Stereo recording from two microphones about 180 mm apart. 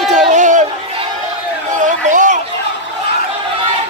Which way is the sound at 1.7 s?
45° right (ahead or behind).